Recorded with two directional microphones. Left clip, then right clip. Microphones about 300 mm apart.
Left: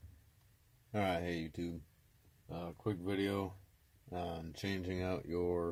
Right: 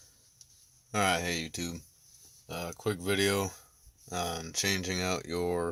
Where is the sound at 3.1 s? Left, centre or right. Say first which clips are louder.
Right 10 dB; right.